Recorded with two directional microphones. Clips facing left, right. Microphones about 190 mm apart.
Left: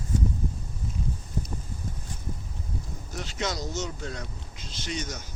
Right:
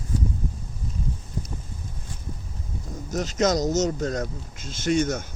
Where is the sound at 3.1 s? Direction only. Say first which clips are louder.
Right 10 dB; 40° right (ahead or behind).